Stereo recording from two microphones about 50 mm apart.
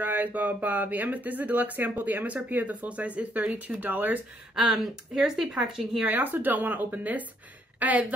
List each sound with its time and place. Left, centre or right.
0.0 s speech: right
4.6 s speech: centre
6.0 s speech: right